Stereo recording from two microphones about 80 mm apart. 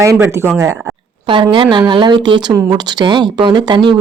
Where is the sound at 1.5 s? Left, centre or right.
Right.